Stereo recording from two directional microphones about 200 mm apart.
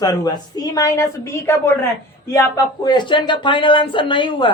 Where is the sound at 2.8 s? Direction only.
20° left (ahead or behind).